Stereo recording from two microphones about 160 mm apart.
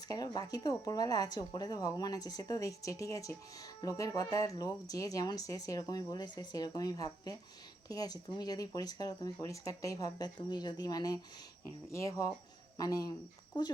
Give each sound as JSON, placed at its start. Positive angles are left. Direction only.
{"t": 0.1, "sound": "speech", "side_deg": 25}